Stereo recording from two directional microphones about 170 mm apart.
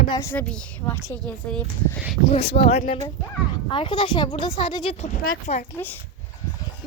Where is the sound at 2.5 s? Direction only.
35° left (ahead or behind).